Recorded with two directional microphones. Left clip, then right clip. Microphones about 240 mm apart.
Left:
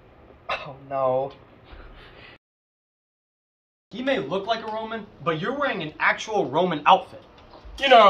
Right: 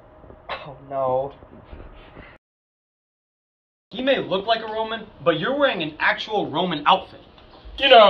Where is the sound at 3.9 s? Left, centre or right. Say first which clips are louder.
Right 4 dB; centre.